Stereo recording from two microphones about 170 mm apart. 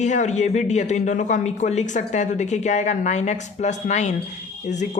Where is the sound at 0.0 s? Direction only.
45° left (ahead or behind).